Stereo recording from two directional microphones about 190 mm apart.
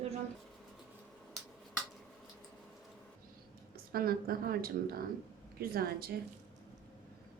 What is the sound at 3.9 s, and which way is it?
Speech, 50° right (ahead or behind).